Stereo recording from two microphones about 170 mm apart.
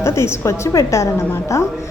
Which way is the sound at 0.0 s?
15° left (ahead or behind).